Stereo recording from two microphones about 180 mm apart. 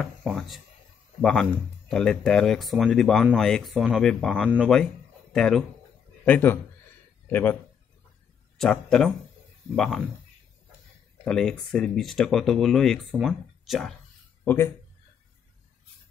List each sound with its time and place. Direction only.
0.0 s a sound: centre (ahead or behind)
1.2 s a man's voice: centre (ahead or behind)
8.5 s speech: 5° left (ahead or behind)
11.2 s speech: 5° left (ahead or behind)